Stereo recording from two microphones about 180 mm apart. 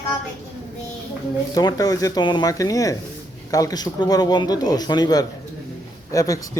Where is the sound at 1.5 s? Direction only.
20° left (ahead or behind).